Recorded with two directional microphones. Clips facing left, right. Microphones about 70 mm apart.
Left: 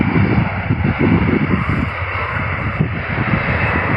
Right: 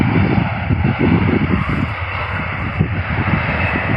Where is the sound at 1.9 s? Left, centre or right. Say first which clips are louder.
Left 1 dB; left.